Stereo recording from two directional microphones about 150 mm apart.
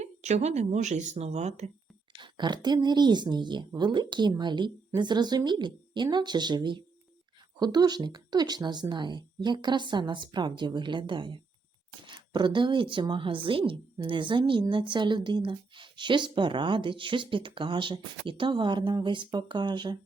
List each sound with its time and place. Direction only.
0.0 s speech: 50° right (ahead or behind)
2.2 s a woman's voice: 30° right (ahead or behind)